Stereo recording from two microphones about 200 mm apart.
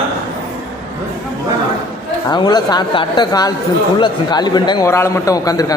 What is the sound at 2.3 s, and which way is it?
A man's voice, 20° left (ahead or behind).